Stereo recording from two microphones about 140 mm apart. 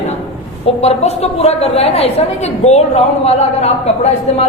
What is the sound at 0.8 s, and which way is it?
A woman's voice, 50° left (ahead or behind).